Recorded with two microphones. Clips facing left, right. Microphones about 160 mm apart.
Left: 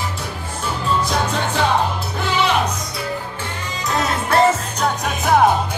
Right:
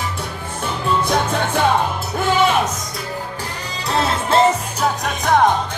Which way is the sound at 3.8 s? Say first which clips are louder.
Right 2 dB; 30° right (ahead or behind).